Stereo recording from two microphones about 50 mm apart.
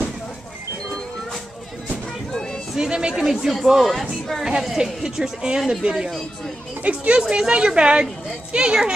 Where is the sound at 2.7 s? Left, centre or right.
Centre.